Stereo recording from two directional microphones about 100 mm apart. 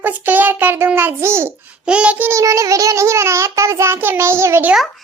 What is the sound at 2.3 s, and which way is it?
Child singing, 30° right (ahead or behind).